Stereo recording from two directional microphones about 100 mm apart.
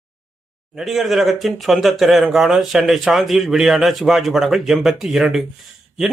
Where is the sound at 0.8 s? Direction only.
Centre (ahead or behind).